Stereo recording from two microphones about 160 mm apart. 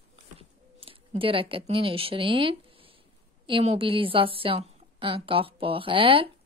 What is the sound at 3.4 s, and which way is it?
A woman's voice, 35° right (ahead or behind).